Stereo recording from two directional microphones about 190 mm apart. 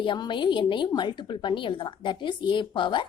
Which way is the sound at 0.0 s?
25° left (ahead or behind).